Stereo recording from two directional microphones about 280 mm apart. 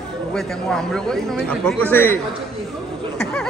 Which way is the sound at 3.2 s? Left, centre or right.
Centre.